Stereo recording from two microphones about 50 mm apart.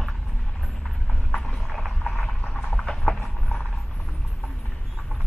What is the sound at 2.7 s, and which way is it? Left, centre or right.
Clip-clop, centre.